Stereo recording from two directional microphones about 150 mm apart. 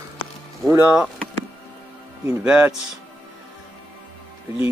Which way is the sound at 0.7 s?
5° right (ahead or behind).